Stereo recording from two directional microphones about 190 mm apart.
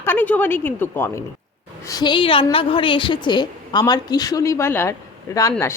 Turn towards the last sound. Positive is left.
turn(degrees=15)  # may be behind; listen again after turning